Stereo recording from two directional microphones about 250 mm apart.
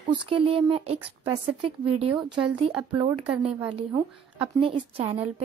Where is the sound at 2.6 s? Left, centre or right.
Centre.